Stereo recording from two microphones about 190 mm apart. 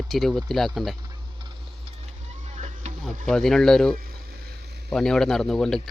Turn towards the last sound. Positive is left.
turn(degrees=0)  # may be behind; listen again after turning